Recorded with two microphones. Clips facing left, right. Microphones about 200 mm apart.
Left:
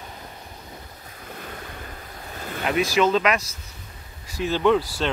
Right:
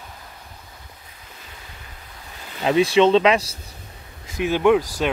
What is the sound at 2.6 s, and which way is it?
Speech, 30° right (ahead or behind).